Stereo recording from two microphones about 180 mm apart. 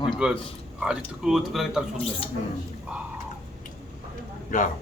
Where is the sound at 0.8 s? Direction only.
5° right (ahead or behind).